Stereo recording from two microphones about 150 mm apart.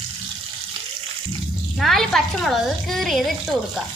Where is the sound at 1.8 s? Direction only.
Centre (ahead or behind).